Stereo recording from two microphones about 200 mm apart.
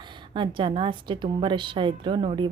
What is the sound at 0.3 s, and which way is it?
A woman's voice, 25° right (ahead or behind).